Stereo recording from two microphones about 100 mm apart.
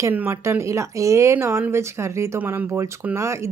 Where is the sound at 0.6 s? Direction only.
30° right (ahead or behind).